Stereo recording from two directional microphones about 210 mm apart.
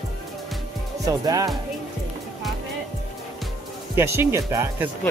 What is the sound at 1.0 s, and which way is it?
Speech, 15° right (ahead or behind).